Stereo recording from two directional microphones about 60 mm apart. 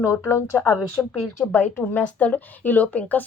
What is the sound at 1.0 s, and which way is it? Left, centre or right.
A woman's voice, left.